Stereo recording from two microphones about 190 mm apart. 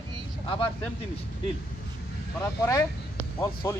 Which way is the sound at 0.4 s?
25° left (ahead or behind).